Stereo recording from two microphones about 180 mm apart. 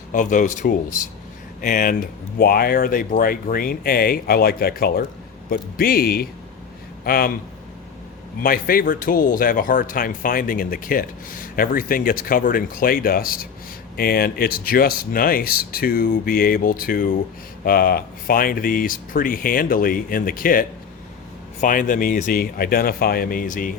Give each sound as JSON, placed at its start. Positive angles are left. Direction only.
{"t": 0.1, "sound": "speech", "side_deg": 45}
{"t": 8.4, "sound": "speech", "side_deg": 55}